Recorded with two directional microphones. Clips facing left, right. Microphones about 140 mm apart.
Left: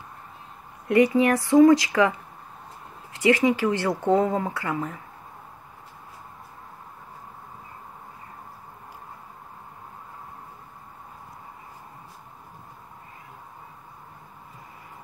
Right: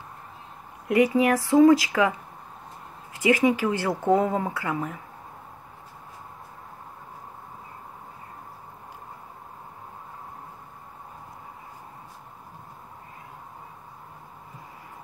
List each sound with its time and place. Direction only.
0.8 s speech: 10° right (ahead or behind)
3.1 s a sound: 10° right (ahead or behind)
3.6 s speech: 10° right (ahead or behind)